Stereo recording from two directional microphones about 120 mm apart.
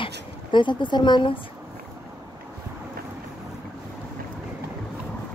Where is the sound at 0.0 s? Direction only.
40° left (ahead or behind).